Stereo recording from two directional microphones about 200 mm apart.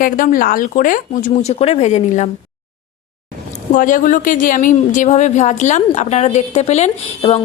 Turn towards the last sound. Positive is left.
turn(degrees=30)  # may be behind; listen again after turning